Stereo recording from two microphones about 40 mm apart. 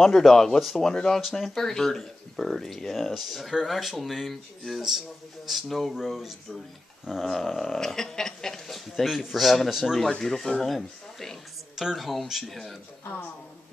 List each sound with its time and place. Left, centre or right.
0.0 s speech: centre
7.1 s speech: centre
8.7 s speech: centre
10.2 s speech: centre
11.7 s speech: centre